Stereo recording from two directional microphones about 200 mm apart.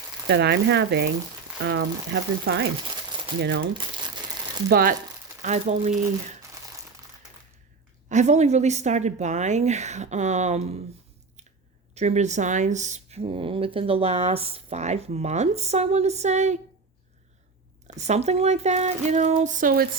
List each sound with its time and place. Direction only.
0.3 s speech: 55° right (ahead or behind)
4.7 s speech: 45° right (ahead or behind)
5.4 s speech: 35° right (ahead or behind)
8.1 s speech: 35° right (ahead or behind)
11.9 s speech: 35° right (ahead or behind)
17.8 s speech: 35° right (ahead or behind)